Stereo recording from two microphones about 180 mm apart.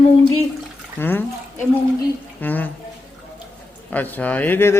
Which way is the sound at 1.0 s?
10° left (ahead or behind).